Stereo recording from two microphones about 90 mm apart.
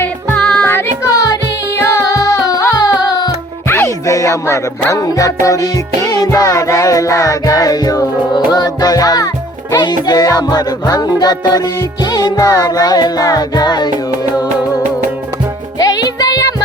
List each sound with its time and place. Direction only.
0.3 s music: 10° left (ahead or behind)
0.7 s child singing: 25° left (ahead or behind)
1.7 s music: 30° left (ahead or behind); by 13.9 s 50° left (ahead or behind)
15.8 s music: 45° left (ahead or behind)